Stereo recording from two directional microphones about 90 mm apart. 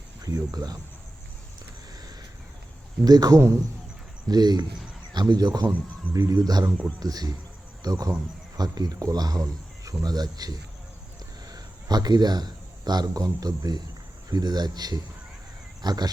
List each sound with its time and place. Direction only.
0.2 s speech: 45° right (ahead or behind)
3.0 s speech: 45° right (ahead or behind)
15.8 s cat: 50° right (ahead or behind)